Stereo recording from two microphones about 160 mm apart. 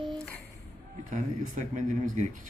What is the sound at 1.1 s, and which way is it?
Speech, 50° right (ahead or behind).